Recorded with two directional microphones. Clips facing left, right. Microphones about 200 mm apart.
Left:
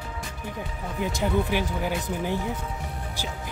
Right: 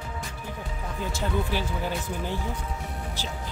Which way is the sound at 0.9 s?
15° left (ahead or behind).